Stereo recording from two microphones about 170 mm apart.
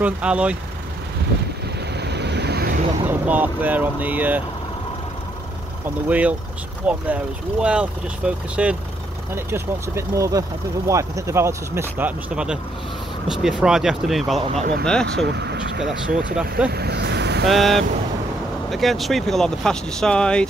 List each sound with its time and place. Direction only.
0.0 s speech: 5° right (ahead or behind)
2.0 s vehicle: 80° right
3.1 s speech: 10° right (ahead or behind)
6.0 s speech: 10° right (ahead or behind)
14.4 s speech: 40° right (ahead or behind)
14.9 s speech: 5° left (ahead or behind)
15.2 s speech: 90° right
16.1 s speech: 60° right (ahead or behind)
16.3 s speech: 5° right (ahead or behind)
16.7 s vehicle: 75° right (ahead or behind)
17.5 s speech: centre (ahead or behind)